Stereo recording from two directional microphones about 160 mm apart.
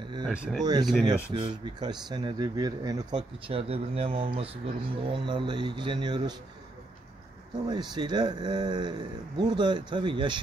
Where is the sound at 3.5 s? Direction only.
35° right (ahead or behind).